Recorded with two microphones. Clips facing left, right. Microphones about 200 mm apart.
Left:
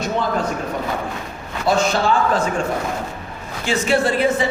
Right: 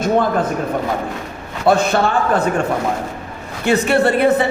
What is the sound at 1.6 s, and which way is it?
Speech, 60° right (ahead or behind).